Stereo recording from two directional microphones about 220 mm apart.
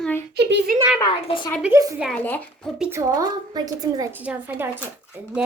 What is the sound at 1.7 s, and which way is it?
Speech, 15° right (ahead or behind).